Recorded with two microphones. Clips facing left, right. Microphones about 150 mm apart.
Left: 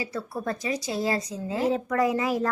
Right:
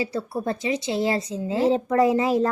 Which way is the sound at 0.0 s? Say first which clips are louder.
Right 5 dB; 25° right (ahead or behind).